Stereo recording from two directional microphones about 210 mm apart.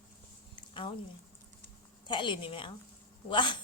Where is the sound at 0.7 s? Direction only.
25° left (ahead or behind).